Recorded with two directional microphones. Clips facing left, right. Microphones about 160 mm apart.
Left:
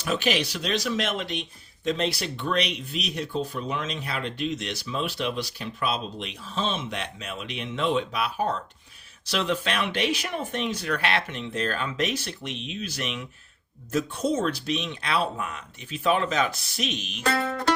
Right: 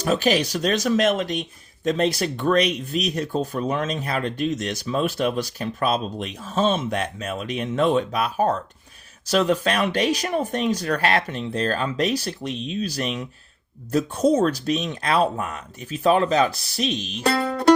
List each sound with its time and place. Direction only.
0.0 s speech: 40° right (ahead or behind)